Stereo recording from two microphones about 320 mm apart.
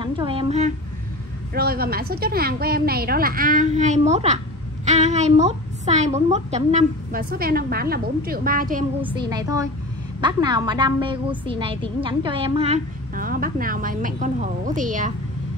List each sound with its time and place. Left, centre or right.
0.0 s a woman's voice: centre
9.0 s a woman's voice: centre